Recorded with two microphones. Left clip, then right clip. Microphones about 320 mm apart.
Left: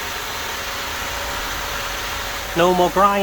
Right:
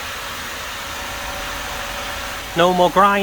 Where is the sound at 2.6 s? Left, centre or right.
Centre.